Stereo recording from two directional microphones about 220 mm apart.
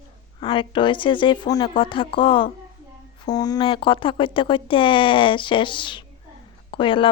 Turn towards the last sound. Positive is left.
turn(degrees=25)  # may be behind; listen again after turning